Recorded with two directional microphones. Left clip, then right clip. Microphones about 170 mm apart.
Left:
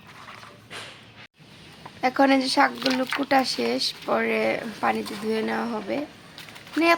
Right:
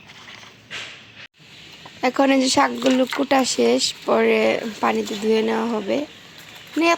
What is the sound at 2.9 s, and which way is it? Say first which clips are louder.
Speech: right 6 dB; 5° right (ahead or behind).